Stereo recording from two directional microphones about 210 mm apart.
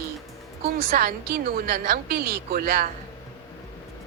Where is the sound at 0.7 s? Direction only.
45° right (ahead or behind).